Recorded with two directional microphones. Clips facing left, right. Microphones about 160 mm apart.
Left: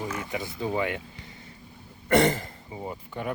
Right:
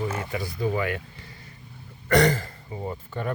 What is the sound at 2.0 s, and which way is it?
Speech, 20° left (ahead or behind).